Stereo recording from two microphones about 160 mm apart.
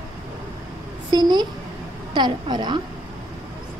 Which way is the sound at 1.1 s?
25° right (ahead or behind).